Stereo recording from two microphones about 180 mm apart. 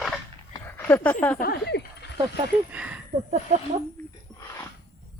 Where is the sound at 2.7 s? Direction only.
5° right (ahead or behind).